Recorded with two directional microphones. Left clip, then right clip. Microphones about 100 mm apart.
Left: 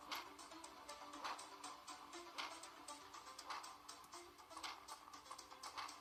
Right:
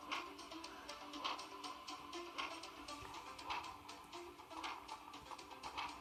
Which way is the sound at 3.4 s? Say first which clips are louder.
Right 6 dB; 35° left (ahead or behind).